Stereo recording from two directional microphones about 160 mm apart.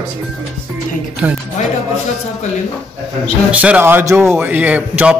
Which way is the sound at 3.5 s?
10° right (ahead or behind).